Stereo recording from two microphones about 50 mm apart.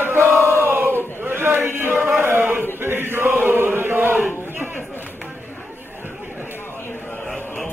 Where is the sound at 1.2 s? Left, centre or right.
Right.